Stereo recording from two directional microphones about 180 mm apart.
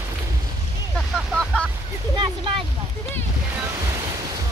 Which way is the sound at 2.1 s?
25° right (ahead or behind).